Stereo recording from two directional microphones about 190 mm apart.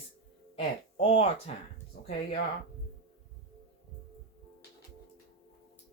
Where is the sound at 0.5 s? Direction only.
30° left (ahead or behind).